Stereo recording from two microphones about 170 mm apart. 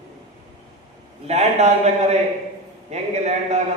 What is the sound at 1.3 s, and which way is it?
A man's voice, 40° right (ahead or behind).